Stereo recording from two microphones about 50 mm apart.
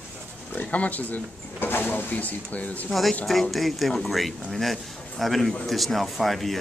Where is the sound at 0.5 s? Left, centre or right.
Left.